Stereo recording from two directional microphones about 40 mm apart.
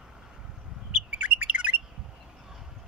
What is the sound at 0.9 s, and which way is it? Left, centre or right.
Bird, right.